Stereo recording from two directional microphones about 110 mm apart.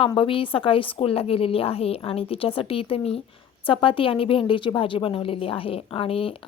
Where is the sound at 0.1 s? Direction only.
50° left (ahead or behind).